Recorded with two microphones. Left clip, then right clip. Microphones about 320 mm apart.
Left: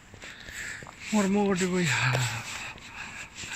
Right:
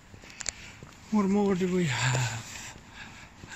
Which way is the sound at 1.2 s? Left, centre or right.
Centre.